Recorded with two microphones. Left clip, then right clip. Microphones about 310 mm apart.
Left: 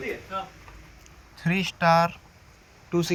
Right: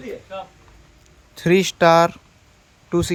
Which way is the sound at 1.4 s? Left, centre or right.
Right.